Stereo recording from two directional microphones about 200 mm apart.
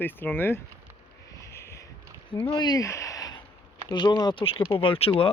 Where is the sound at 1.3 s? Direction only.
15° left (ahead or behind).